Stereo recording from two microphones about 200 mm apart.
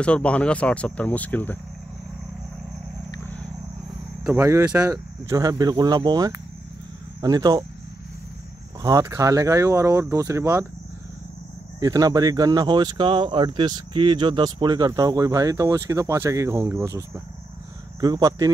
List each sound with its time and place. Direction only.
0.0 s speech: 5° left (ahead or behind)
4.3 s speech: 15° right (ahead or behind)
8.8 s speech: 15° right (ahead or behind)
11.8 s speech: 20° right (ahead or behind)